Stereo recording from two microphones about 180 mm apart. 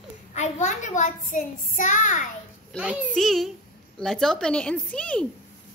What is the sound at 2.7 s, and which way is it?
A woman's voice, 5° right (ahead or behind).